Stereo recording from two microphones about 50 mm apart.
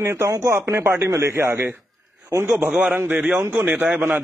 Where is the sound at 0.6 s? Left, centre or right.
Right.